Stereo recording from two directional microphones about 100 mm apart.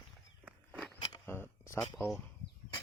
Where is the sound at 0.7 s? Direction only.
5° left (ahead or behind).